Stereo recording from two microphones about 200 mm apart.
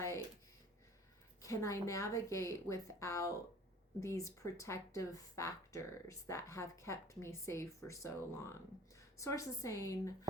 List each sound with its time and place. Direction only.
1.4 s a woman's voice: 15° left (ahead or behind)